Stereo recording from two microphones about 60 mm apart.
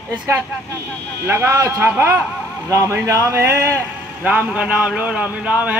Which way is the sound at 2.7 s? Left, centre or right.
Right.